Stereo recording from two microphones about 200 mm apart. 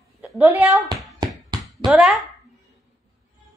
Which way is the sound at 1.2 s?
20° right (ahead or behind).